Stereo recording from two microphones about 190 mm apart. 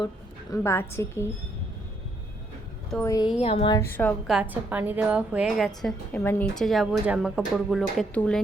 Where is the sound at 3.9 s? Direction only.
10° left (ahead or behind).